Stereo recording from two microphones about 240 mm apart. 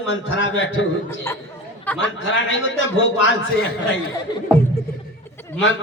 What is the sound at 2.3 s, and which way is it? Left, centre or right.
A man's voice, left.